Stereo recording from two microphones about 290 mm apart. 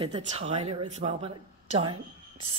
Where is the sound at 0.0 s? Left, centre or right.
Centre.